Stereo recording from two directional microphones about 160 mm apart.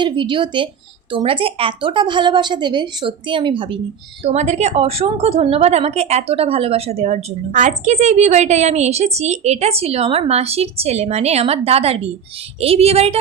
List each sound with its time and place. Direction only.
0.0 s a woman's voice: 30° right (ahead or behind)
4.2 s a woman's voice: 40° right (ahead or behind)